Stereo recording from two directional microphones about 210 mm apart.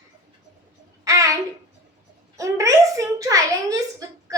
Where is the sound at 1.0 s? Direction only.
15° right (ahead or behind).